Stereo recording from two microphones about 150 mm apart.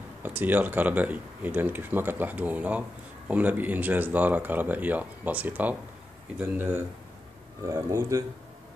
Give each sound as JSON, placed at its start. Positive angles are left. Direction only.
{"t": 0.2, "sound": "speech", "side_deg": -10}